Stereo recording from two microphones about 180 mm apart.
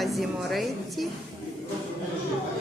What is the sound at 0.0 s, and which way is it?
A woman's voice, centre (ahead or behind).